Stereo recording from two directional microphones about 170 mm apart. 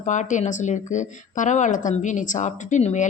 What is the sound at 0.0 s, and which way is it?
Speech, 45° left (ahead or behind).